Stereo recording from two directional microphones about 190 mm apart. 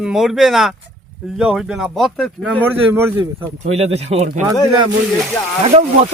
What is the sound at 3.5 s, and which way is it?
Speech, 35° right (ahead or behind).